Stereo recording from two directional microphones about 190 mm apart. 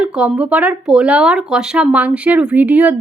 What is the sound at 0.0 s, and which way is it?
Speech, 5° right (ahead or behind).